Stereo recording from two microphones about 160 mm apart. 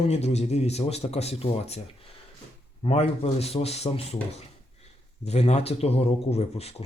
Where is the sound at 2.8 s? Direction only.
40° left (ahead or behind).